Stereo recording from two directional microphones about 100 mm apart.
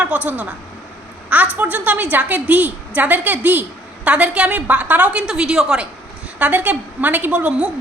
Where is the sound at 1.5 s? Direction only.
15° right (ahead or behind).